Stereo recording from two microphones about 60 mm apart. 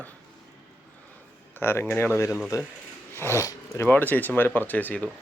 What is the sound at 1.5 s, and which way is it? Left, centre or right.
Speech, left.